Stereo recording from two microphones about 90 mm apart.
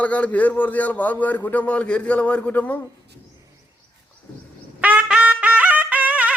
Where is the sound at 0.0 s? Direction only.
15° left (ahead or behind).